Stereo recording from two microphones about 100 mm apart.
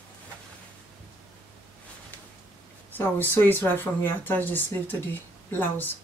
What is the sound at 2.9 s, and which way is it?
Speech, 20° left (ahead or behind).